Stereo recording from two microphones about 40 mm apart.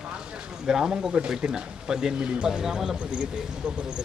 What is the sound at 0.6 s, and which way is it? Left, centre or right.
Speech, centre.